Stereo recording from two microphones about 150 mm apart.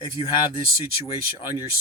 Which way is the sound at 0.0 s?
30° left (ahead or behind).